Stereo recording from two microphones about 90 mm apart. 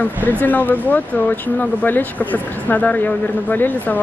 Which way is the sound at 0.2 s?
20° left (ahead or behind).